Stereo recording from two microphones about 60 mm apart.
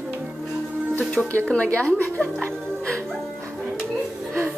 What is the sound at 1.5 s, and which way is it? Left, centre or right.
Speech, left.